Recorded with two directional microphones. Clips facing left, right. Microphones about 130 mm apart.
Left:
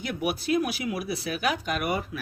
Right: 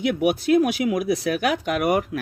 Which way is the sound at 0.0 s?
85° right.